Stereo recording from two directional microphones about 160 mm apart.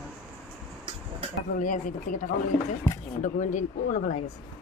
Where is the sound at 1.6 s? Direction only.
55° left (ahead or behind).